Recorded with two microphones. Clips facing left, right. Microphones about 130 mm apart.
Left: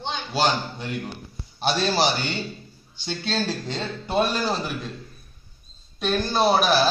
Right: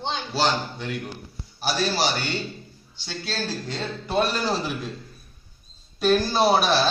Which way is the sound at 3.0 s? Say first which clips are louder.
Left 4 dB; 25° left (ahead or behind).